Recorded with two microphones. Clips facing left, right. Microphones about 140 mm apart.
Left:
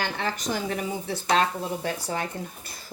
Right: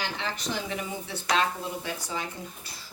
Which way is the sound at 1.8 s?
55° left (ahead or behind).